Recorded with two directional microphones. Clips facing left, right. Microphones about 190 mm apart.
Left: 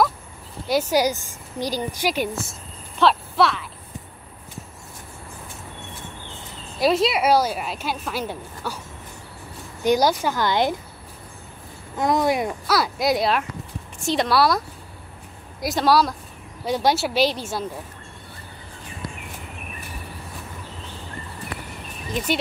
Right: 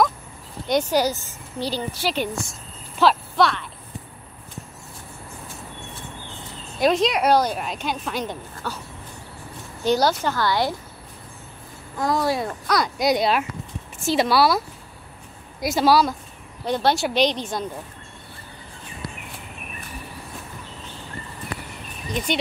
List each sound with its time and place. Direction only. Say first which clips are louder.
0.7 s a woman's voice: even; 5° left (ahead or behind)
6.8 s a woman's voice: even; 5° left (ahead or behind)
9.8 s a woman's voice: left 1 dB; 10° left (ahead or behind)
12.0 s speech: left 2 dB; 20° left (ahead or behind)
12.6 s a woman's voice: right 1 dB; 5° left (ahead or behind)
15.6 s a woman's voice: right 1 dB; centre (ahead or behind)